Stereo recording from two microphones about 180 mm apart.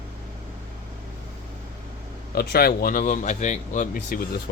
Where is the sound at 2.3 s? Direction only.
60° left (ahead or behind).